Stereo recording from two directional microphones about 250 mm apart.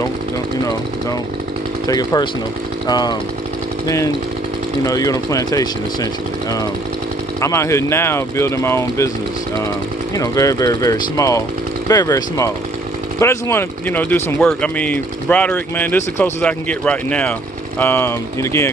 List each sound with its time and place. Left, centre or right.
1.9 s speech: centre
7.3 s speech: centre
10.1 s speech: centre